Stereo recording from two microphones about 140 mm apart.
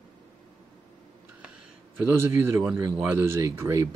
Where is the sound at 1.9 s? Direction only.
10° right (ahead or behind).